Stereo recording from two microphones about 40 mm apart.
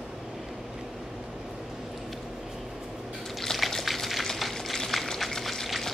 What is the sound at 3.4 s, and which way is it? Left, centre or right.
Liquid, centre.